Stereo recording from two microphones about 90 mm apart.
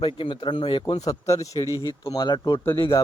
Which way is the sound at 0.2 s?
60° left (ahead or behind).